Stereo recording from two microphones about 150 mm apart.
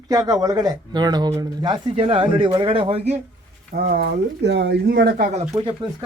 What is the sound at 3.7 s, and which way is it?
Speech, 90° right.